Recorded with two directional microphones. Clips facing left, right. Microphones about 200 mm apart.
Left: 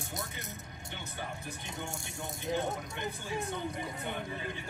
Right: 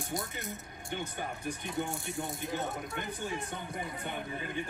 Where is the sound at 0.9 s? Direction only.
50° right (ahead or behind).